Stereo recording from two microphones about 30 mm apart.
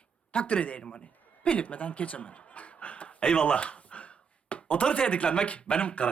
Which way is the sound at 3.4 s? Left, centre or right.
Left.